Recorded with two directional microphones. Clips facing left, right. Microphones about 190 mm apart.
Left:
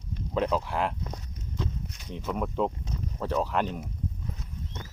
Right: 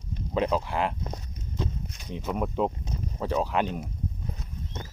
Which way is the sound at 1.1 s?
20° right (ahead or behind).